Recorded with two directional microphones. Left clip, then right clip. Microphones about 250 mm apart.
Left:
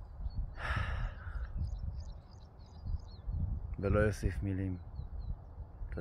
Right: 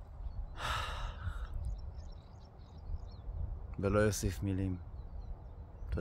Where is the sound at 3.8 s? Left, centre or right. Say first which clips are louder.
Right 1 dB; centre.